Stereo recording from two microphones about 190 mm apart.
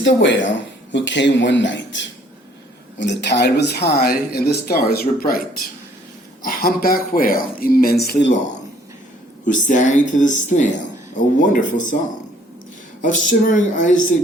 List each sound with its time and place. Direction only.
0.0 s speech: 70° left (ahead or behind)
9.5 s speech: 40° left (ahead or behind)